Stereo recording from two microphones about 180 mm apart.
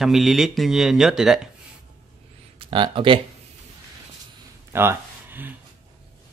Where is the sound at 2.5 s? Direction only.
25° right (ahead or behind).